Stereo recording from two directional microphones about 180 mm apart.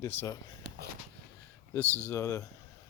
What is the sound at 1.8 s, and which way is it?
Speech, 15° right (ahead or behind).